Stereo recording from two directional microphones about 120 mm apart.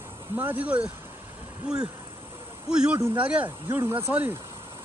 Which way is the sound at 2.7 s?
5° right (ahead or behind).